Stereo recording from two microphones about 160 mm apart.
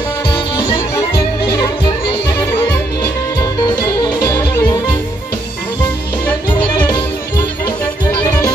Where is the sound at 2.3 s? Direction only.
15° left (ahead or behind).